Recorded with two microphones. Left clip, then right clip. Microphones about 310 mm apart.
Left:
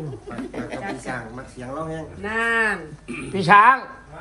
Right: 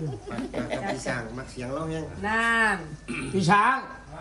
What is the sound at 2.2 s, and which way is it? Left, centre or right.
Speech, right.